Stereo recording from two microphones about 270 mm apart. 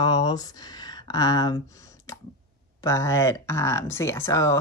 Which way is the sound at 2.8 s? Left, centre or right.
Centre.